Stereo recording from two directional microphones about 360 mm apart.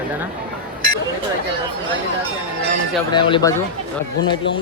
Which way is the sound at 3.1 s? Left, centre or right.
Centre.